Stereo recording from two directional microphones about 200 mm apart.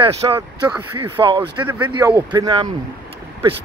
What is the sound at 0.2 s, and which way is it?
Speech, 20° right (ahead or behind).